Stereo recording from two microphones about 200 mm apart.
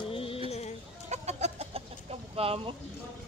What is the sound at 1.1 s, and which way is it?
Chicken, 35° right (ahead or behind).